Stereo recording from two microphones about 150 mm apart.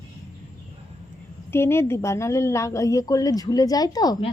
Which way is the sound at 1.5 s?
15° left (ahead or behind).